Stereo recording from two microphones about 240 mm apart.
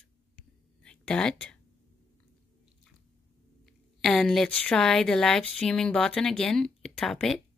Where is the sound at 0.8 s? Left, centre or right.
Centre.